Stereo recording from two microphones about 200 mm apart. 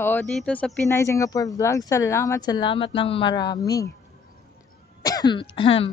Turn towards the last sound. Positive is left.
turn(degrees=30)  # may be behind; listen again after turning